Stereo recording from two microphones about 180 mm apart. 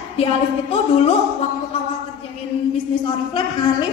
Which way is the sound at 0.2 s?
35° left (ahead or behind).